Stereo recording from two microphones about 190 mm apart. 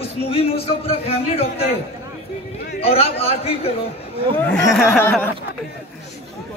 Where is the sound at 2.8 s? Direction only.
30° left (ahead or behind).